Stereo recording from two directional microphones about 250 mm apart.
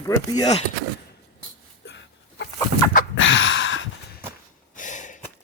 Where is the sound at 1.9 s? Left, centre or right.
Left.